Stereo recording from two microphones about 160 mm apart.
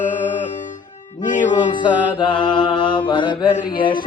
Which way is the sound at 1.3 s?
55° left (ahead or behind).